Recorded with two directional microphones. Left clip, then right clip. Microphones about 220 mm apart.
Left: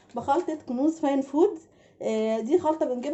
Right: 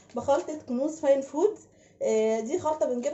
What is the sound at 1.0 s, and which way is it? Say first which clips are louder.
A woman's voice: right 2 dB; 50° left (ahead or behind).